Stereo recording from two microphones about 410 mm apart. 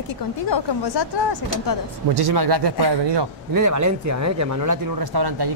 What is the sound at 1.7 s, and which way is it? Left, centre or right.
Speech, left.